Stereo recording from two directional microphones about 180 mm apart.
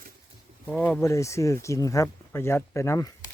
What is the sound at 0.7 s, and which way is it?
Speech, 10° left (ahead or behind).